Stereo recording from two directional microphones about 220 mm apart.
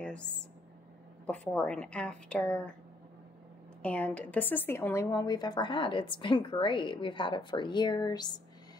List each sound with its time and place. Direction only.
0.0 s a sound: 5° left (ahead or behind)
1.2 s a woman's voice: 5° left (ahead or behind)
3.8 s speech: 5° left (ahead or behind)